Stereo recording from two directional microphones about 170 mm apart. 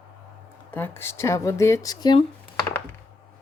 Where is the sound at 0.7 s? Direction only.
10° left (ahead or behind).